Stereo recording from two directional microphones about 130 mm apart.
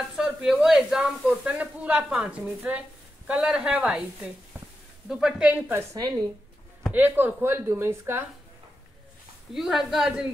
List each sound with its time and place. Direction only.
0.1 s speech: 5° right (ahead or behind)
5.7 s a woman's voice: 25° right (ahead or behind)
6.9 s speech: 15° right (ahead or behind)
9.5 s speech: centre (ahead or behind)